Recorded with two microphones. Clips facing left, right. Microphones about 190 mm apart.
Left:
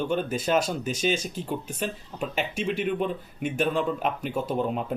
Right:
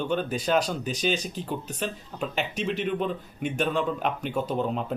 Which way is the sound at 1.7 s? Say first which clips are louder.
Left 1 dB; 5° left (ahead or behind).